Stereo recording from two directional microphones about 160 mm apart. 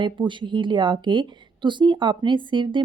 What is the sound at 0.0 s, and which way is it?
Speech, 30° right (ahead or behind).